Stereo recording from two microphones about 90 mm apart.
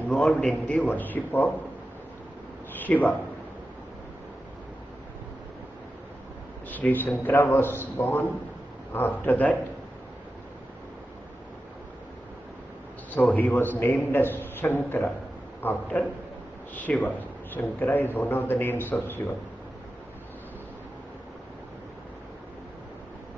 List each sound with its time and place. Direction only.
0.1 s a man's voice: centre (ahead or behind)
0.4 s a man's voice: 15° left (ahead or behind)
2.8 s a man's voice: 20° left (ahead or behind)
6.7 s a man's voice: 20° left (ahead or behind)
13.1 s a man's voice: 15° left (ahead or behind)